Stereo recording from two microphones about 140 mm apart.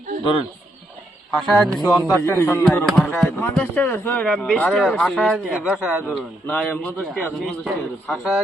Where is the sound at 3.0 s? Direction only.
5° left (ahead or behind).